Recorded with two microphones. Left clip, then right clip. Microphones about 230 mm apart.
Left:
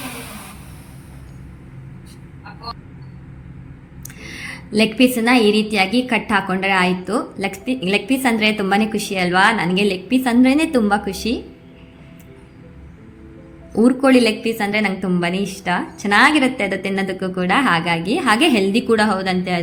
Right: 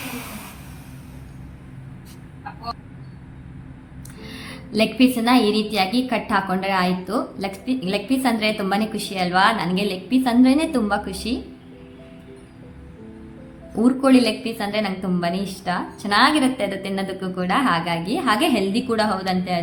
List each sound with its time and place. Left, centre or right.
4.2 s a woman's voice: centre
13.7 s a woman's voice: centre